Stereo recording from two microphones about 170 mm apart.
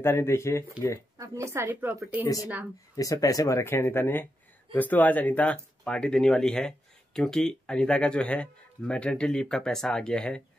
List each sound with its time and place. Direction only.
0.0 s speech: 15° left (ahead or behind)
1.1 s a woman's voice: 20° right (ahead or behind)
3.0 s speech: 20° left (ahead or behind)